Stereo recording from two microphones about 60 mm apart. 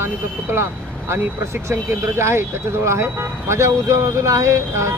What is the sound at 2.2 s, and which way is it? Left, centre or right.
Speech, right.